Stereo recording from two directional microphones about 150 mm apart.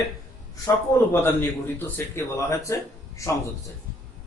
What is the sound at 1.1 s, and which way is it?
A man's voice, 15° left (ahead or behind).